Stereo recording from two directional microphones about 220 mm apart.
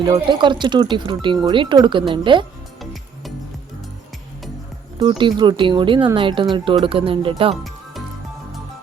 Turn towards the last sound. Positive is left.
turn(degrees=-25)  # may be behind; listen again after turning